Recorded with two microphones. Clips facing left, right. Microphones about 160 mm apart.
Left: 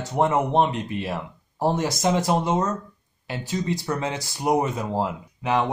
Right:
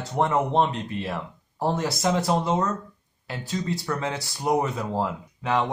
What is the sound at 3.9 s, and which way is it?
Speech, 20° left (ahead or behind).